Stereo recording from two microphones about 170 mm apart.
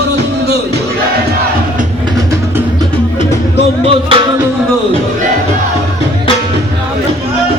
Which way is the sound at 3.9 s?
30° right (ahead or behind).